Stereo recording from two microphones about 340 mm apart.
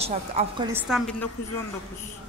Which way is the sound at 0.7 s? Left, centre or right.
Centre.